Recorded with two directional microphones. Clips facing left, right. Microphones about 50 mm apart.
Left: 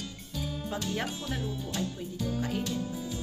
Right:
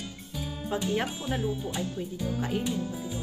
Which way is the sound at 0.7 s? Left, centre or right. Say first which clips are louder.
Right 6 dB; centre.